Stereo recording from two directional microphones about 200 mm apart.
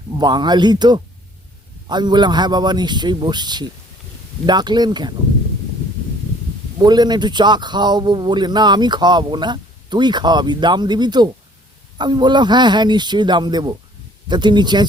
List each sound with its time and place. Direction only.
0.2 s a man's voice: 20° right (ahead or behind)
6.7 s a man's voice: 20° right (ahead or behind)